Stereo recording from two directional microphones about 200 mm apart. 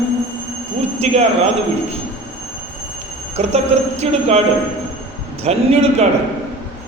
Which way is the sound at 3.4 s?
35° right (ahead or behind).